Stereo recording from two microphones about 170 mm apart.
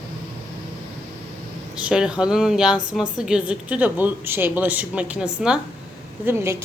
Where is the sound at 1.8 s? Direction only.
5° right (ahead or behind).